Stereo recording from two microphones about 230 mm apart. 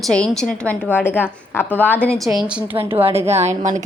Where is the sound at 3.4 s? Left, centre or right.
Right.